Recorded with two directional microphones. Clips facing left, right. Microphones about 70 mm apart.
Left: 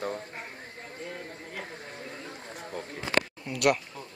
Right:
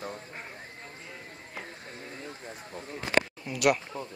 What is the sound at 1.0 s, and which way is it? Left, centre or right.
Clip-clop, left.